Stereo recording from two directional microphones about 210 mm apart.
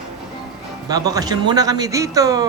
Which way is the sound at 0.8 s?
15° right (ahead or behind).